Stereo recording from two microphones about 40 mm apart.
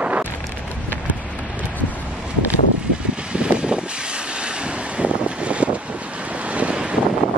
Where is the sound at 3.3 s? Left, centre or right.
Right.